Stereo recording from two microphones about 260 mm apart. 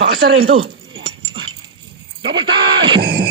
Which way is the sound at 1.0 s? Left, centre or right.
Centre.